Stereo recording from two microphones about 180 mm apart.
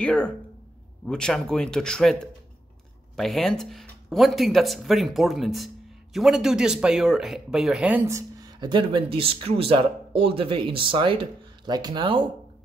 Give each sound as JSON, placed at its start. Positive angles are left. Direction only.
{"t": 0.0, "sound": "speech", "side_deg": 5}